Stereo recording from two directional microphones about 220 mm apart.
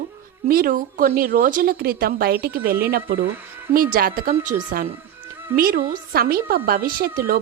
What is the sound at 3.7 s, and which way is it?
A woman's voice, 40° right (ahead or behind).